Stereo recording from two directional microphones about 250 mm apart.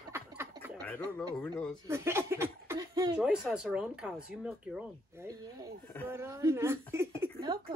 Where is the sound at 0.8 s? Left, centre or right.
Centre.